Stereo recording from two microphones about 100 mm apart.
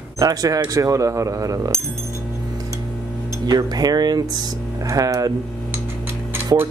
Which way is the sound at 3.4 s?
40° right (ahead or behind).